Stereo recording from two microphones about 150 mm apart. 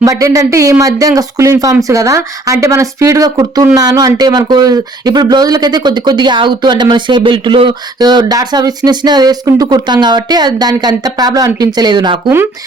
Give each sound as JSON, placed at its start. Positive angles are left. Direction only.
{"t": 0.0, "sound": "speech", "side_deg": -20}